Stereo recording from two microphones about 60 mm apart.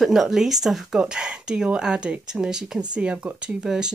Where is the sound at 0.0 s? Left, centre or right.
Centre.